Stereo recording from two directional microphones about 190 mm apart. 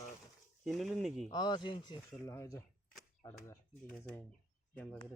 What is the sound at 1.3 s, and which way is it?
Speech, 20° left (ahead or behind).